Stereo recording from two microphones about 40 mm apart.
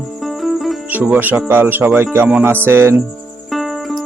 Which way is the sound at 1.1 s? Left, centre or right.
Right.